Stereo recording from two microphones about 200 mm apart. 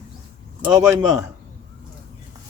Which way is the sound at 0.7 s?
15° right (ahead or behind).